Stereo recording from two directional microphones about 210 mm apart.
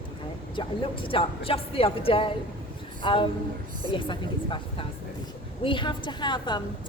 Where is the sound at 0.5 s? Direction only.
25° left (ahead or behind).